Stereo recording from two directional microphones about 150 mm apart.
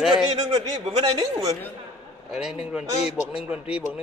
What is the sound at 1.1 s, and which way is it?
Speech, 25° right (ahead or behind).